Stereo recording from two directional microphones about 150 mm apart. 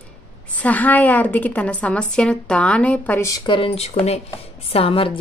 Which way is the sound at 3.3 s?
30° left (ahead or behind).